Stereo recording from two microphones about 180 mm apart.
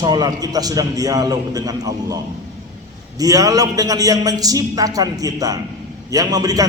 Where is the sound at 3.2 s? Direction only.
20° right (ahead or behind).